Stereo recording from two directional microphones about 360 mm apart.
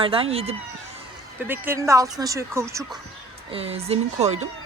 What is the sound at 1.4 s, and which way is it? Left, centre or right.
Speech, centre.